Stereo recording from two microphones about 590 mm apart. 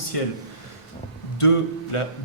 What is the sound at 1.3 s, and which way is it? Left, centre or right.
Speech, left.